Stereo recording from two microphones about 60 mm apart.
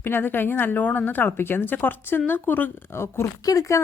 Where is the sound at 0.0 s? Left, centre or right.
Left.